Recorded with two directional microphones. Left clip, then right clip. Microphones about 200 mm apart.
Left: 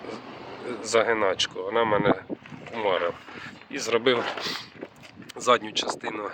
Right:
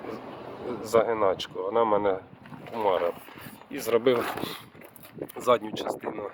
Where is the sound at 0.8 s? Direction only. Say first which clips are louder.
Left 1 dB; 5° right (ahead or behind).